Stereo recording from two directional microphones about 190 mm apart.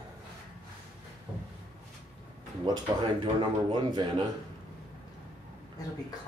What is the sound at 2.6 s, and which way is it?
Speech, 20° right (ahead or behind).